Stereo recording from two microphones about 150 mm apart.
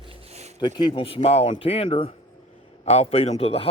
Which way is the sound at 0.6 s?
30° left (ahead or behind).